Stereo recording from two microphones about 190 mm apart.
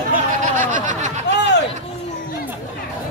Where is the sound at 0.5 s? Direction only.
40° right (ahead or behind).